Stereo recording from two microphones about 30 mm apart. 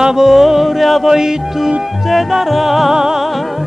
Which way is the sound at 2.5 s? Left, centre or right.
Centre.